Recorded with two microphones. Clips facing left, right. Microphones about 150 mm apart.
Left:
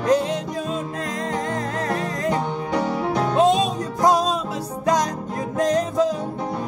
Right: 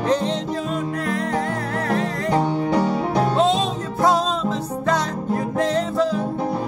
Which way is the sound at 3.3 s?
15° left (ahead or behind).